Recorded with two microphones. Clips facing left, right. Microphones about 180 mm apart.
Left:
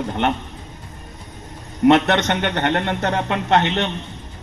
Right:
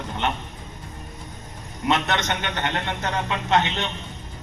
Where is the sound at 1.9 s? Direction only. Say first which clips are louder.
Left 7 dB; 60° left (ahead or behind).